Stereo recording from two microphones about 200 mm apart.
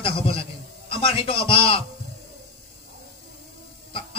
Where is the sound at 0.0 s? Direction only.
25° left (ahead or behind).